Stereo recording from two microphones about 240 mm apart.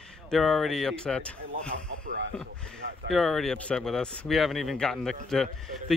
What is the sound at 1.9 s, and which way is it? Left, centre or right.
Speech, right.